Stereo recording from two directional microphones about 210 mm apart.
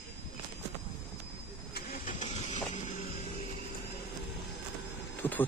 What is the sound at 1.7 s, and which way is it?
Vehicle, 40° left (ahead or behind).